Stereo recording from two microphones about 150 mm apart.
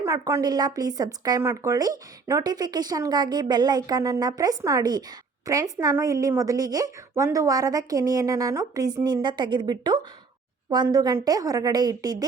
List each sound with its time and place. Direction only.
0.0 s speech: 20° right (ahead or behind)